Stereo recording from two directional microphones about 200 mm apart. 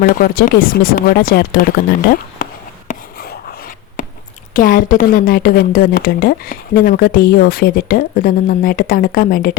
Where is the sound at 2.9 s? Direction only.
45° left (ahead or behind).